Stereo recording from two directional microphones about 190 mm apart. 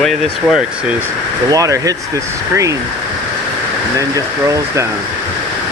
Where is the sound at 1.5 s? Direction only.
20° right (ahead or behind).